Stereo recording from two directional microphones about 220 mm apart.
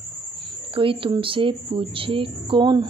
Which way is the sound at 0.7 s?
25° right (ahead or behind).